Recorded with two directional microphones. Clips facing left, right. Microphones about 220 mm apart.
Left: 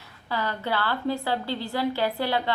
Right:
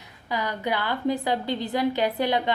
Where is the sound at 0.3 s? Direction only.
15° right (ahead or behind).